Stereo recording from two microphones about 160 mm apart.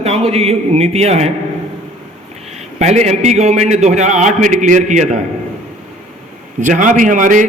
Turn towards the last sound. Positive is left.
turn(degrees=-55)  # may be behind; listen again after turning